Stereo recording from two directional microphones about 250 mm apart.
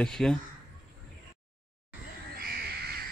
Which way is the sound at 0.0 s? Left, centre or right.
Centre.